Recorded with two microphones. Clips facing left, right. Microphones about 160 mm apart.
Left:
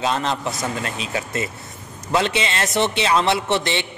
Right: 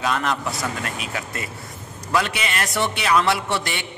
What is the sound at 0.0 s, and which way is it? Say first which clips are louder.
A man's voice: left 1 dB; 25° left (ahead or behind).